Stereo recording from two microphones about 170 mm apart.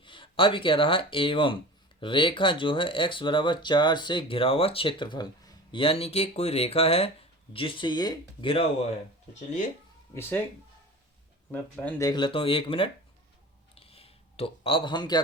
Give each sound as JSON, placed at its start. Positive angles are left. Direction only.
{"t": 0.0, "sound": "speech", "side_deg": 30}
{"t": 10.2, "sound": "speech", "side_deg": 15}
{"t": 11.5, "sound": "speech", "side_deg": 10}
{"t": 12.0, "sound": "speech", "side_deg": 25}
{"t": 13.7, "sound": "a sound", "side_deg": 35}